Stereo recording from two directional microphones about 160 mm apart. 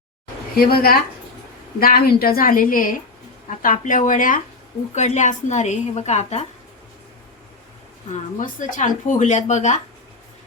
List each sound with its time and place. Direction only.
0.5 s a woman's voice: 70° left (ahead or behind)
4.9 s speech: 45° left (ahead or behind)
8.1 s speech: 55° left (ahead or behind)